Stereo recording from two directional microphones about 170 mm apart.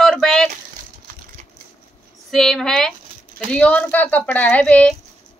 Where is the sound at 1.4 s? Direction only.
50° right (ahead or behind).